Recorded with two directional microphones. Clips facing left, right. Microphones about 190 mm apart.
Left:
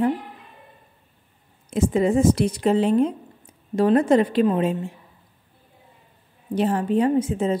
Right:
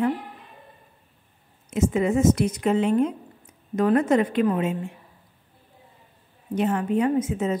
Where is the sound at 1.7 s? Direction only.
35° left (ahead or behind).